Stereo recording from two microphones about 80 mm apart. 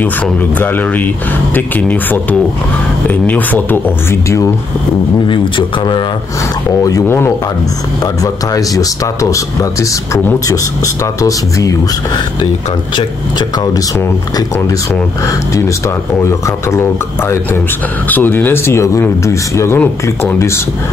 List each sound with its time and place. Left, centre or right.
0.6 s speech: left
5.3 s speech: left
6.8 s speech: left
7.1 s speech: left
8.0 s speech: left
16.2 s speech: left